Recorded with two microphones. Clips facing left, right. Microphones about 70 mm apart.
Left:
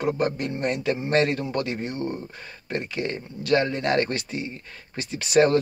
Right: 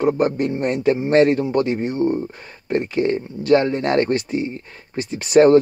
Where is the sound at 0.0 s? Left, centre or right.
Right.